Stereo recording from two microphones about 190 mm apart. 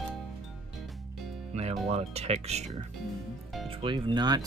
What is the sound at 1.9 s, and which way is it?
Speech, 35° right (ahead or behind).